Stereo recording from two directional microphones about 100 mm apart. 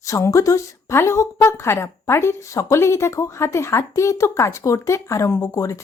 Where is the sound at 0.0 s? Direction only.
35° left (ahead or behind).